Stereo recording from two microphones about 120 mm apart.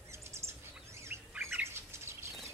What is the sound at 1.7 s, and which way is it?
Bird, 20° right (ahead or behind).